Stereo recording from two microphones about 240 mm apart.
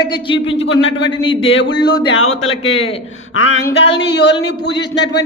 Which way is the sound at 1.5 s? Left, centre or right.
Left.